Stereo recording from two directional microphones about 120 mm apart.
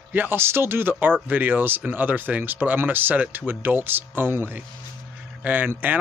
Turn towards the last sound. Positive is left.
turn(degrees=-15)  # may be behind; listen again after turning